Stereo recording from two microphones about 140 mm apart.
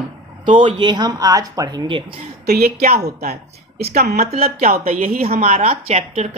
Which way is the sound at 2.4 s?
90° right.